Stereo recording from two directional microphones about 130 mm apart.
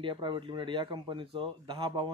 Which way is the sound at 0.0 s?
35° right (ahead or behind).